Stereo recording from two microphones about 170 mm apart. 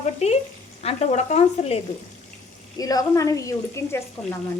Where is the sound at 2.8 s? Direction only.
20° left (ahead or behind).